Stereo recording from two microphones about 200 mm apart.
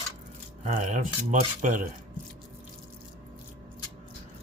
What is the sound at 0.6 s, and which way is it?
Speech, 40° right (ahead or behind).